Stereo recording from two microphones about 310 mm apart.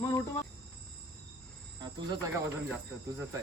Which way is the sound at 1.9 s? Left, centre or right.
Centre.